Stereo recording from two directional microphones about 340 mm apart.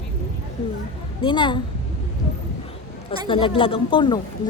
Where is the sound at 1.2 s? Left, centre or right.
Centre.